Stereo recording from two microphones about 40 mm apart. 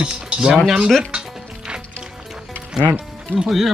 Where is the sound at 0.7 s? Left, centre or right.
Centre.